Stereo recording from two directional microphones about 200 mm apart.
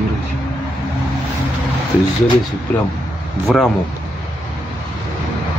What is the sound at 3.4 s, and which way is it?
Speech, centre (ahead or behind).